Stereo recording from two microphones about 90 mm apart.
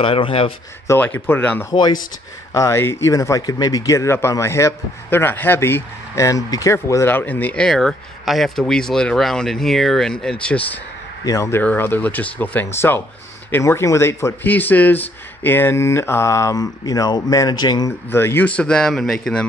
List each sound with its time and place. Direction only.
0.0 s speech: 90° left
0.9 s speech: 20° left (ahead or behind)
1.7 s speech: 50° left (ahead or behind)
2.5 s a man's voice: 35° left (ahead or behind); by 7.6 s 20° left (ahead or behind)
7.6 s speech: 5° left (ahead or behind)
11.6 s a man's voice: 25° left (ahead or behind); by 17.9 s 50° left (ahead or behind)
18.1 s speech: 25° left (ahead or behind)
18.5 s speech: 10° left (ahead or behind)